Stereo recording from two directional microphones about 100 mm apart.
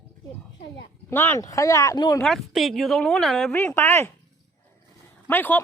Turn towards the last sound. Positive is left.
turn(degrees=20)  # may be behind; listen again after turning